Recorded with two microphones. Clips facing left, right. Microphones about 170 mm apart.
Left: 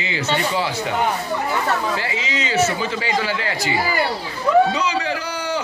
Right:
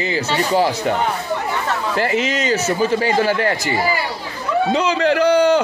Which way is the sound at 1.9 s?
55° right (ahead or behind).